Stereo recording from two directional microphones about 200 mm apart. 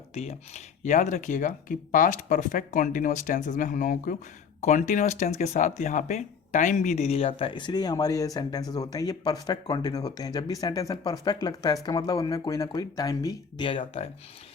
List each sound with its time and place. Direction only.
0.1 s speech: 35° left (ahead or behind)